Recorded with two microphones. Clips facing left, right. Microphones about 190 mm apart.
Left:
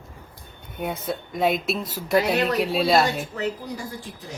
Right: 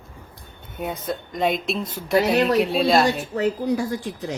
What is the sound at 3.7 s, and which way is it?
Speech, 70° right (ahead or behind).